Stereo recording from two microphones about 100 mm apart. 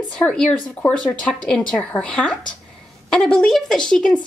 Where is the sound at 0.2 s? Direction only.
5° left (ahead or behind).